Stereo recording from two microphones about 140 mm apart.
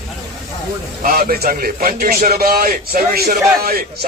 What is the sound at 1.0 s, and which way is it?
A man's voice, 90° right.